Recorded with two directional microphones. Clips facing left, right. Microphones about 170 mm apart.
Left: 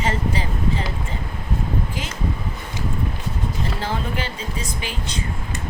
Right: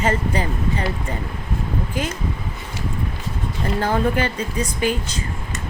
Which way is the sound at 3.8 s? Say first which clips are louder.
Right 9 dB; 50° right (ahead or behind).